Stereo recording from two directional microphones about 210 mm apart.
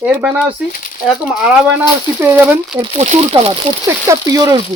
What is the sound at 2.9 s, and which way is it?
Speech, 30° right (ahead or behind).